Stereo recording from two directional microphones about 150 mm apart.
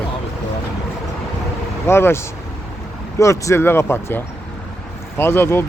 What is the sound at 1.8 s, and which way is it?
Speech, 15° left (ahead or behind).